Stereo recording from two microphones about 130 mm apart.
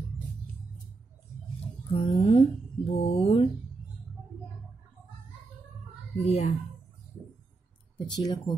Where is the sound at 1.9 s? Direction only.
45° left (ahead or behind).